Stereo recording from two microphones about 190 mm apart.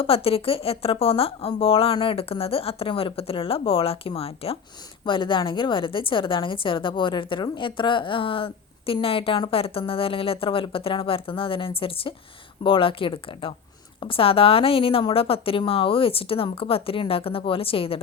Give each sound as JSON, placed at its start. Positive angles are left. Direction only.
{"t": 0.0, "sound": "a woman's voice", "side_deg": 30}